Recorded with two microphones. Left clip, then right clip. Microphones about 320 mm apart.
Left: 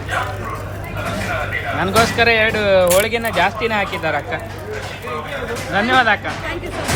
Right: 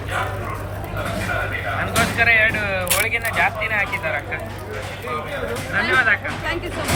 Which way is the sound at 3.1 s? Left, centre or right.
Left.